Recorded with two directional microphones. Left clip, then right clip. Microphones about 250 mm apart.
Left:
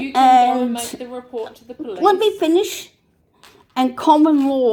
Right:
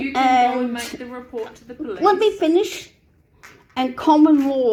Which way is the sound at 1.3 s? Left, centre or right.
Centre.